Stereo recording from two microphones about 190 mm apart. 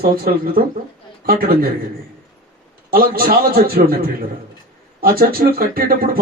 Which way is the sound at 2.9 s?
50° right (ahead or behind).